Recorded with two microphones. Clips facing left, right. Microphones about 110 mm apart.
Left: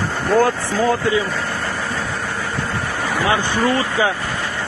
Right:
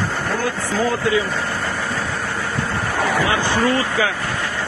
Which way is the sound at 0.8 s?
30° left (ahead or behind).